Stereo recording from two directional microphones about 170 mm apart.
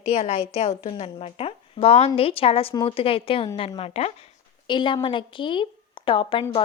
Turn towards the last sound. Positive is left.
turn(degrees=30)  # may be behind; listen again after turning